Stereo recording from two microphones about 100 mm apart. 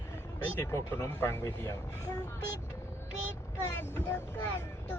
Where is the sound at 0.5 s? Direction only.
25° left (ahead or behind).